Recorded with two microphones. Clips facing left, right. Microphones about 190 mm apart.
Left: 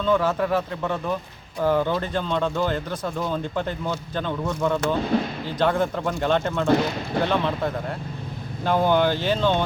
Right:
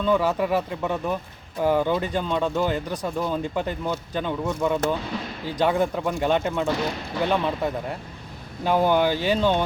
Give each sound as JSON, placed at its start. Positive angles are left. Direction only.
{"t": 0.0, "sound": "speech", "side_deg": -10}
{"t": 5.1, "sound": "speech", "side_deg": 55}
{"t": 5.5, "sound": "speech", "side_deg": -15}